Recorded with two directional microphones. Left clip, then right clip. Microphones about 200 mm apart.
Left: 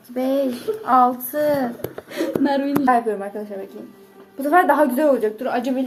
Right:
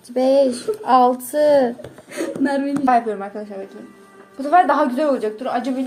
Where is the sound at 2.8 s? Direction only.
5° right (ahead or behind).